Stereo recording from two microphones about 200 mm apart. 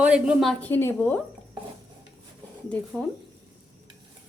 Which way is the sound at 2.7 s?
5° left (ahead or behind).